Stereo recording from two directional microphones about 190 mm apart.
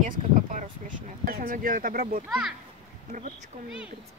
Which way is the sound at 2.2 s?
5° right (ahead or behind).